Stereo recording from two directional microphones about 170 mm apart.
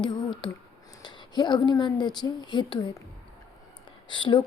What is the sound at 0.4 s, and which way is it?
Speech, 25° left (ahead or behind).